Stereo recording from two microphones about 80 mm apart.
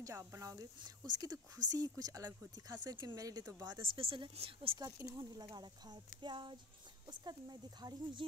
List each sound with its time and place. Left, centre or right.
0.0 s speech: right
0.7 s speech: right
3.8 s speech: right
5.0 s speech: right
7.1 s speech: right